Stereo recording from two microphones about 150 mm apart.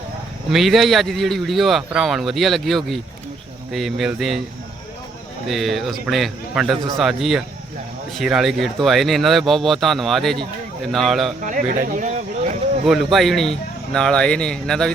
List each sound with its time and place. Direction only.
0.5 s speech: centre (ahead or behind)
5.5 s speech: centre (ahead or behind)
11.4 s a sound: 60° right (ahead or behind)
12.8 s speech: centre (ahead or behind)